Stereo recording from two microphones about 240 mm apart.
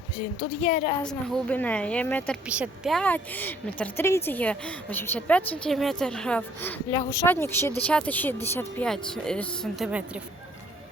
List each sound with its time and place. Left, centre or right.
0.6 s a woman's voice: left
1.0 s a woman's voice: centre